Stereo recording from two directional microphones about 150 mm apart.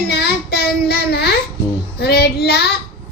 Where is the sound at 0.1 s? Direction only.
90° left.